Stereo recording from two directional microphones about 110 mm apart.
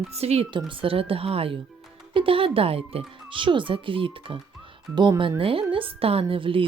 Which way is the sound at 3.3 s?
50° right (ahead or behind).